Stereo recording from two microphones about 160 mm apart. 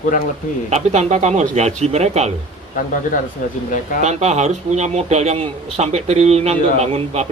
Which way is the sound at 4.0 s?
45° right (ahead or behind).